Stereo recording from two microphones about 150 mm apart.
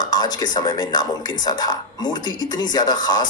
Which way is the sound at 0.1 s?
25° left (ahead or behind).